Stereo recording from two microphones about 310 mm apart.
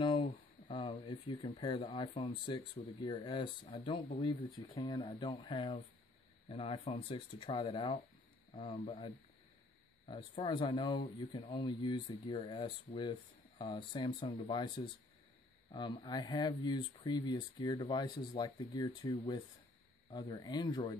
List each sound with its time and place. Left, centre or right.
0.0 s speech: centre
15.7 s speech: centre